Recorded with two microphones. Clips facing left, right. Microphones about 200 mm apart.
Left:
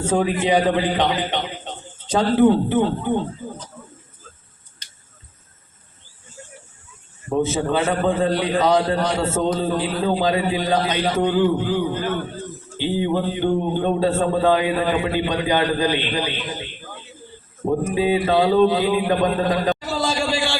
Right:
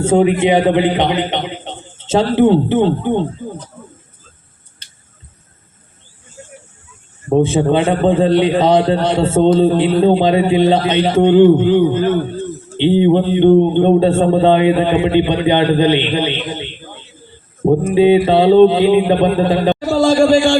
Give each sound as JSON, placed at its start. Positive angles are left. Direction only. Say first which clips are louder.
{"t": 0.0, "sound": "a man's voice", "louder": "right 8 dB", "side_deg": -25}
{"t": 7.3, "sound": "a man's voice", "louder": "right 8 dB", "side_deg": -30}
{"t": 19.8, "sound": "a sound", "louder": "right 12 dB", "side_deg": -50}